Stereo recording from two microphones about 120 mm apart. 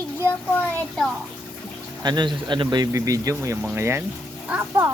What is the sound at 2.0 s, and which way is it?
Speech, 40° right (ahead or behind).